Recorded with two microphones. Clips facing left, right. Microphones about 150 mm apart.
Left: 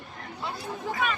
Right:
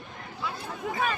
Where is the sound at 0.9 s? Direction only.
25° right (ahead or behind).